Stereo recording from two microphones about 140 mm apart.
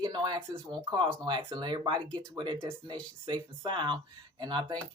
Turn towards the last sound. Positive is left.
turn(degrees=-35)  # may be behind; listen again after turning